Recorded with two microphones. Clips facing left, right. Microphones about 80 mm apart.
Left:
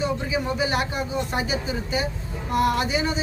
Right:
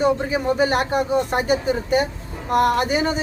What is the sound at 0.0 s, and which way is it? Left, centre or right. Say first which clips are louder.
Speech: right 6 dB; right.